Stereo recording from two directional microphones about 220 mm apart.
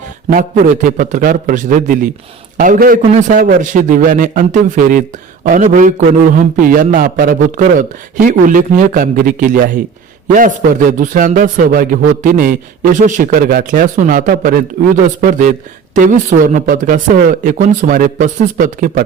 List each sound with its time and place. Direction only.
0.3 s a man's voice: 35° right (ahead or behind)